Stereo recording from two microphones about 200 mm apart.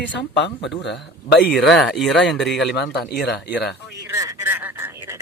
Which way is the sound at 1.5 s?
Centre (ahead or behind).